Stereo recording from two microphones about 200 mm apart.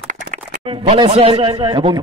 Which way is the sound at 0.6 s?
25° right (ahead or behind).